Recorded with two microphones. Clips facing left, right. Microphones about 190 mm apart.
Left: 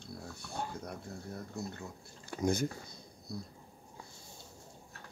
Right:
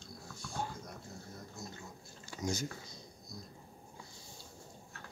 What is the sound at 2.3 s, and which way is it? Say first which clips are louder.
Speech: left 6 dB; 55° left (ahead or behind).